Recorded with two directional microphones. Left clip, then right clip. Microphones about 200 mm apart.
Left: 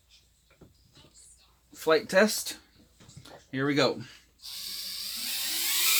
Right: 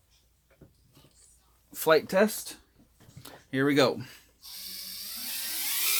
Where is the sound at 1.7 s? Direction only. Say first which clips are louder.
Right 2 dB; 55° right (ahead or behind).